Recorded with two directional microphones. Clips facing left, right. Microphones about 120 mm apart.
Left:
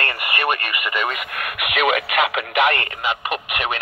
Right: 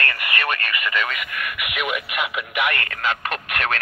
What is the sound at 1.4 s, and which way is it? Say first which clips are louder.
Speech: left 8 dB; 90° left.